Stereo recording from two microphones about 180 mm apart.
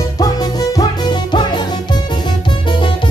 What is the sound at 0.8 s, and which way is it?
Music, 25° left (ahead or behind).